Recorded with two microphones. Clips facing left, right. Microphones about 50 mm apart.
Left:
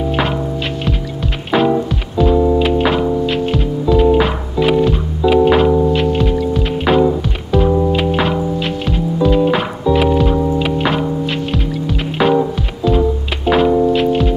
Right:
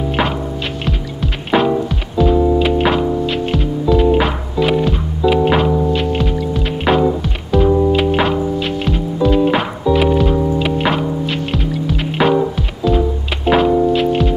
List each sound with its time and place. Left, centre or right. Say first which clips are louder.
0.8 s music: left 1 dB; centre